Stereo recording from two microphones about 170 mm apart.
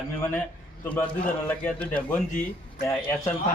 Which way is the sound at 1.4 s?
10° left (ahead or behind).